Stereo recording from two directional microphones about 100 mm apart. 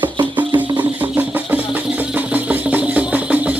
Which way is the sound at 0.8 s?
15° right (ahead or behind).